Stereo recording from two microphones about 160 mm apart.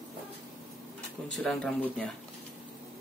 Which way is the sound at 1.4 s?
5° left (ahead or behind).